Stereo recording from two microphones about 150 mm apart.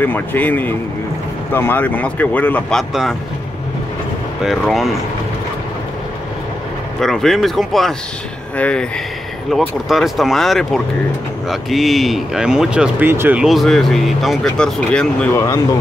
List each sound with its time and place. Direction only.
0.0 s speech: 10° left (ahead or behind)
2.9 s speech: centre (ahead or behind)
4.5 s speech: centre (ahead or behind)
7.0 s speech: 5° left (ahead or behind)
9.5 s speech: centre (ahead or behind)
13.5 s speech: centre (ahead or behind)
15.3 s speech: 20° left (ahead or behind)